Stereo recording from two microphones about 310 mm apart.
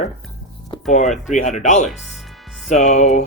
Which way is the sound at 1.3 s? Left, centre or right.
Left.